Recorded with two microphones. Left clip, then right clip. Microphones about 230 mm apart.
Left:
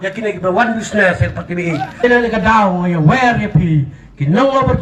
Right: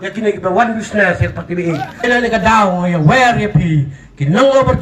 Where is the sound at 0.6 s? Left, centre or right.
Centre.